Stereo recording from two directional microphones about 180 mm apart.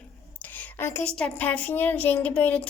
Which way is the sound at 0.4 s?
10° left (ahead or behind).